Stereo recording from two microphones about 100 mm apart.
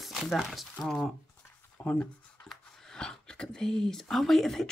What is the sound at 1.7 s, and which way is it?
Speech, 15° left (ahead or behind).